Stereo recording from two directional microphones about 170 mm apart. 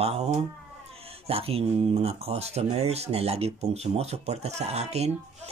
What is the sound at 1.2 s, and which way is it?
Speech, 35° right (ahead or behind).